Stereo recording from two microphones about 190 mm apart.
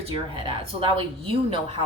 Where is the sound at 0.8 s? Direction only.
30° right (ahead or behind).